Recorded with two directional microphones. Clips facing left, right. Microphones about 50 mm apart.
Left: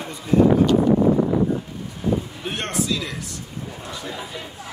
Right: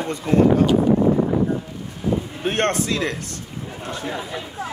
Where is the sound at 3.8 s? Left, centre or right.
Right.